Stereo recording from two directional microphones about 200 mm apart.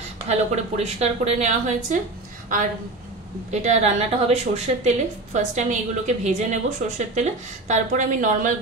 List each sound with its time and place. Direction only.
0.3 s a woman's voice: 30° right (ahead or behind)
3.5 s a woman's voice: 35° right (ahead or behind)